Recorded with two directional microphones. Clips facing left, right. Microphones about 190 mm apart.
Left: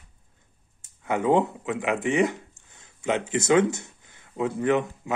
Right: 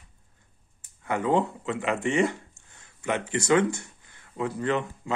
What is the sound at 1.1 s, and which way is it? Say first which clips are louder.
Speech: left 3 dB; 15° left (ahead or behind).